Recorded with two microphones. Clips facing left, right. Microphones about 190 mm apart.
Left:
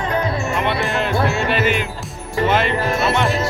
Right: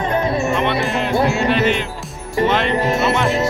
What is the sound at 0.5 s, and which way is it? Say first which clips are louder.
Music: right 2 dB; centre (ahead or behind).